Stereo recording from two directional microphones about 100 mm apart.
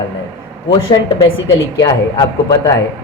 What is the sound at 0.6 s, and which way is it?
Speech, 60° left (ahead or behind).